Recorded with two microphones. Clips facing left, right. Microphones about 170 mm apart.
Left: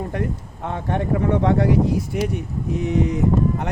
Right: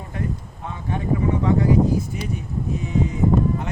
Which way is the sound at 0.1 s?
65° left (ahead or behind).